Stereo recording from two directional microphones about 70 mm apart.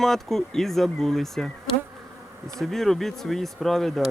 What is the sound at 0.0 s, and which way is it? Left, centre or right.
Speech, centre.